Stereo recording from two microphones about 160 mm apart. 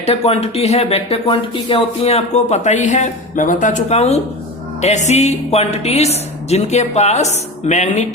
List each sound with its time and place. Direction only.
0.0 s a woman's voice: 40° left (ahead or behind)